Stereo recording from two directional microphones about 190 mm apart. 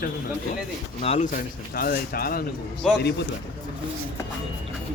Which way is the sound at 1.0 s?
35° left (ahead or behind).